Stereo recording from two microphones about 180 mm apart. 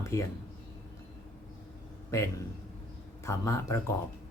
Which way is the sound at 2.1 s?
15° left (ahead or behind).